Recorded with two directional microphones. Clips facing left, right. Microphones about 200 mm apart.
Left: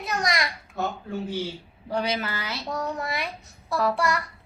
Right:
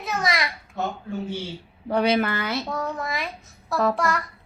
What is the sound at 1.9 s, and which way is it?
Speech, 60° right (ahead or behind).